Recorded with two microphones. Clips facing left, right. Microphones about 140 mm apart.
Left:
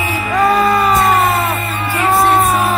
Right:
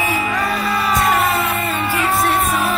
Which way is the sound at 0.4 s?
45° left (ahead or behind).